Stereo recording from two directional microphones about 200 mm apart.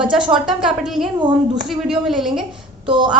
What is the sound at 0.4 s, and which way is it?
A woman's voice, centre (ahead or behind).